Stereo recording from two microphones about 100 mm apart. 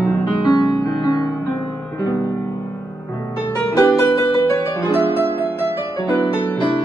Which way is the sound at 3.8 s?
35° left (ahead or behind).